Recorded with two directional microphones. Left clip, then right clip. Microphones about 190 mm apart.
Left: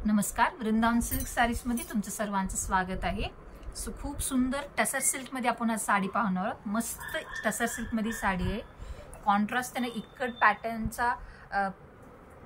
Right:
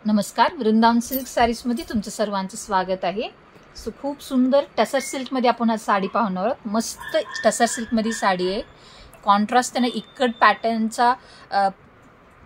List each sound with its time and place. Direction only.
0.0 s a woman's voice: 30° right (ahead or behind)